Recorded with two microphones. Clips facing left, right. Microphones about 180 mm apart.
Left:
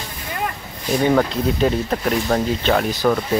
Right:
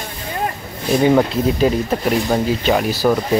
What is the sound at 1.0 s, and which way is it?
Speech, 10° right (ahead or behind).